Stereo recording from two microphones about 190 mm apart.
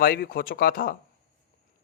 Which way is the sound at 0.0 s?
50° left (ahead or behind).